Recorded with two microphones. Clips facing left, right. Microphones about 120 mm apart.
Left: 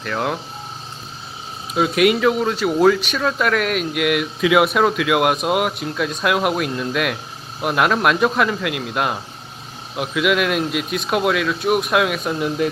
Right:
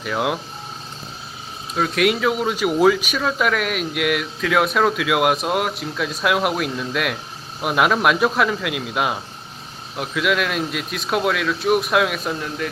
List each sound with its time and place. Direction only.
0.0 s speech: 5° right (ahead or behind)
1.7 s speech: 5° left (ahead or behind)
12.4 s a man's voice: 25° left (ahead or behind)